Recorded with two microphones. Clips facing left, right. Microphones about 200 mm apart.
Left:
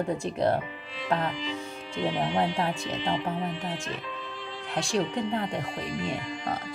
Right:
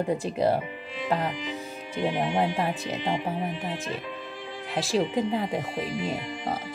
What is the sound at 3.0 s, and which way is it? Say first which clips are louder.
Speech: even; 15° right (ahead or behind).